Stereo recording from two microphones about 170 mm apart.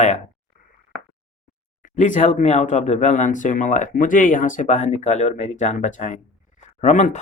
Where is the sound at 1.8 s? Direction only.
50° left (ahead or behind).